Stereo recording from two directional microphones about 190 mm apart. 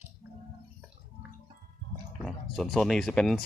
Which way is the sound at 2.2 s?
Centre (ahead or behind).